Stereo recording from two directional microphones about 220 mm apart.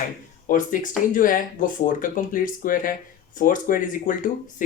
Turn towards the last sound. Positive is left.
turn(degrees=35)  # may be behind; listen again after turning